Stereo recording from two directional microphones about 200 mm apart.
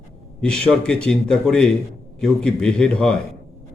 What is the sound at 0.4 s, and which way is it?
A man's voice, 5° left (ahead or behind).